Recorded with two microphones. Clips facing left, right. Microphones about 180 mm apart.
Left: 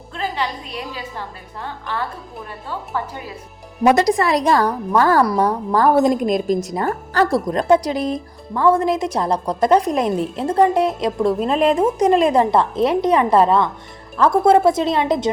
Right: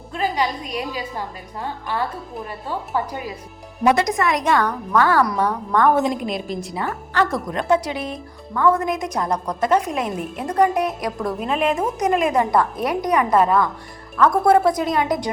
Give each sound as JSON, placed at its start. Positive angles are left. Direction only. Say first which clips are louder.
{"t": 0.1, "sound": "a woman's voice", "louder": "right 2 dB", "side_deg": -10}
{"t": 3.8, "sound": "a woman's voice", "louder": "left 3 dB", "side_deg": 35}